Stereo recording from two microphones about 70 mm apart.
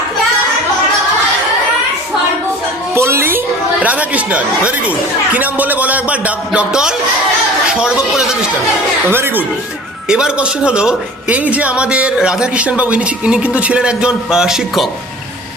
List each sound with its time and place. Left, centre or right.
2.9 s music: right
3.8 s a man's voice: right
9.0 s speech: right
10.1 s a man's voice: centre